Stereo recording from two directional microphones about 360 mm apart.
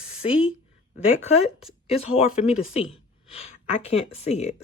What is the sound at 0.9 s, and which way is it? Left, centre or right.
Speech, left.